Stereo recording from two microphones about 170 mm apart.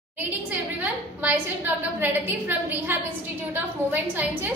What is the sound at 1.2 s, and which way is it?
A woman's voice, 10° right (ahead or behind).